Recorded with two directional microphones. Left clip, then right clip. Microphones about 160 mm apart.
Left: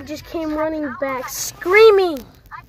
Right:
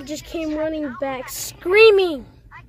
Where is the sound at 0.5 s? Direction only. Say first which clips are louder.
Left 3 dB; 5° right (ahead or behind).